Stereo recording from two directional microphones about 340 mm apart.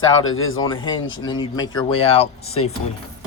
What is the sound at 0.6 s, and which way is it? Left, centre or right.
Speech, centre.